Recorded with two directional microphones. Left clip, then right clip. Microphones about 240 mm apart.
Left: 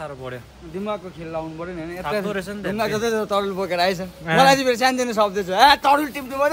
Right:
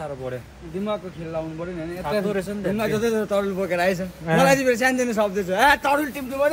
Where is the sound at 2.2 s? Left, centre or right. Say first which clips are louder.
Right 1 dB; centre.